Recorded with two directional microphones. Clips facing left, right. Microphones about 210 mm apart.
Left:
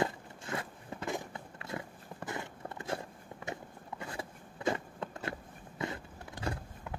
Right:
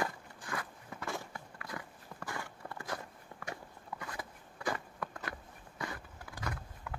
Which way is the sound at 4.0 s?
25° left (ahead or behind).